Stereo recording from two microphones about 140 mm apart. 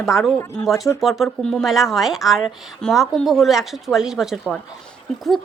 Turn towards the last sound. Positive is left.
turn(degrees=0)  # may be behind; listen again after turning